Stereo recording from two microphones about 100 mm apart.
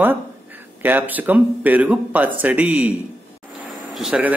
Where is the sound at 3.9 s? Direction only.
5° right (ahead or behind).